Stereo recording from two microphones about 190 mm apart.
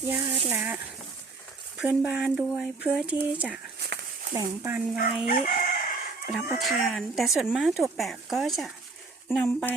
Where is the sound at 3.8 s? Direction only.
60° right (ahead or behind).